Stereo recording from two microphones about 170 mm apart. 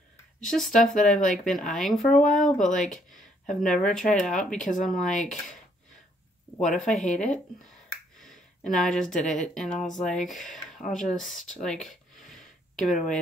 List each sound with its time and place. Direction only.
0.4 s speech: 5° left (ahead or behind)
6.6 s speech: 5° left (ahead or behind)
7.0 s speech: 45° left (ahead or behind)
8.2 s speech: centre (ahead or behind)